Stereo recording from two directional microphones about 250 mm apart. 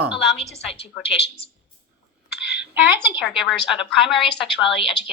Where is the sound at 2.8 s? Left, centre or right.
Centre.